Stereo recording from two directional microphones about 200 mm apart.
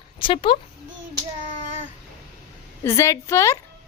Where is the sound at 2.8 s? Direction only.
15° left (ahead or behind).